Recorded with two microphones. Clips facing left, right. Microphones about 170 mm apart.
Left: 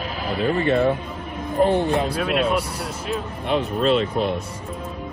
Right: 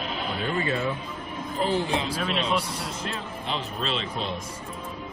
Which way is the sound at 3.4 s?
50° left (ahead or behind).